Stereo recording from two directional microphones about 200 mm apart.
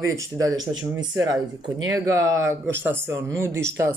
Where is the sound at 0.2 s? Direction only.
15° right (ahead or behind).